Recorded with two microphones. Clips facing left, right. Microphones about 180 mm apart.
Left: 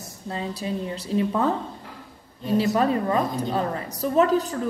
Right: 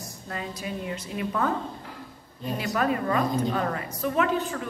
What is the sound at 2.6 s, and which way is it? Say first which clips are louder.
Speech: left 4 dB; 30° left (ahead or behind).